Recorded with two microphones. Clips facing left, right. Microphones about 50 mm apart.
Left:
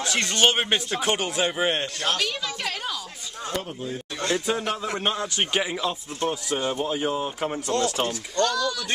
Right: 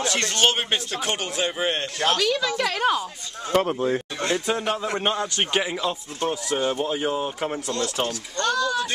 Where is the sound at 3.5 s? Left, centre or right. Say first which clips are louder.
Right 11 dB; right.